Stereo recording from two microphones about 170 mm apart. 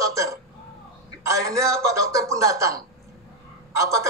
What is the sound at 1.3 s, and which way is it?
Speech, 20° right (ahead or behind).